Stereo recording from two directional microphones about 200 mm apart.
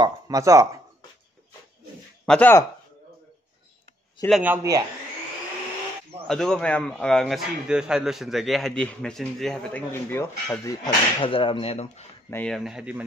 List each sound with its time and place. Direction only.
0.0 s speech: 15° right (ahead or behind)
2.2 s speech: 5° left (ahead or behind)
4.3 s speech: 10° right (ahead or behind)
6.2 s a man's voice: 5° left (ahead or behind); by 12.1 s 35° left (ahead or behind)
12.3 s a man's voice: 5° left (ahead or behind)